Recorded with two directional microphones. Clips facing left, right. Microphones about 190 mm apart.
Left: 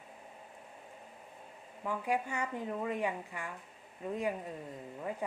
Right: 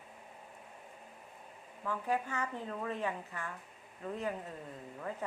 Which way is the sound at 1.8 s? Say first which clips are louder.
Left 1 dB; 15° left (ahead or behind).